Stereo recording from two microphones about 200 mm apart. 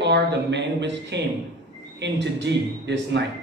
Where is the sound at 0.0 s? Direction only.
60° right (ahead or behind).